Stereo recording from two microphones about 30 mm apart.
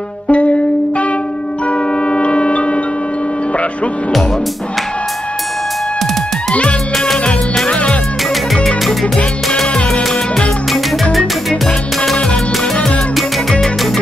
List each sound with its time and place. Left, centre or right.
0.3 s music: left
7.6 s music: left
9.8 s music: left
10.7 s music: centre